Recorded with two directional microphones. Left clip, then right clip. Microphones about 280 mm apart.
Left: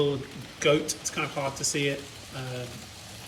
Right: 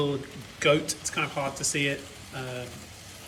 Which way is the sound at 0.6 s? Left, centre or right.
Centre.